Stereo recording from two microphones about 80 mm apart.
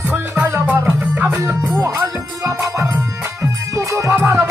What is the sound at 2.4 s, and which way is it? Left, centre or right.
Music, right.